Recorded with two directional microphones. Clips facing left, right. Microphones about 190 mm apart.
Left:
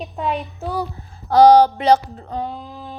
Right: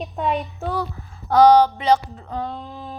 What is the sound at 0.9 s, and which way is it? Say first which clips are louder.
Speech: left 3 dB; 35° left (ahead or behind).